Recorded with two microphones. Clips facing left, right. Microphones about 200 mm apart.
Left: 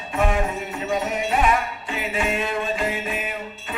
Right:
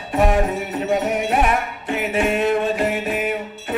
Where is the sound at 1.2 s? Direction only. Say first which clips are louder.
Right 2 dB; 60° right (ahead or behind).